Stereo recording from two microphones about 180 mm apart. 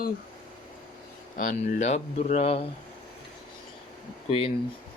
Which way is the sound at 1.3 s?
45° left (ahead or behind).